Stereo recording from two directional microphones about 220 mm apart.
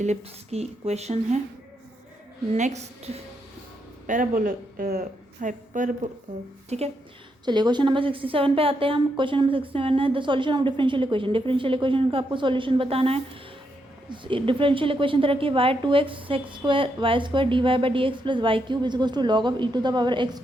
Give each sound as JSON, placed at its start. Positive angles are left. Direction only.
{"t": 0.0, "sound": "a woman's voice", "side_deg": -30}
{"t": 2.6, "sound": "a woman's voice", "side_deg": -30}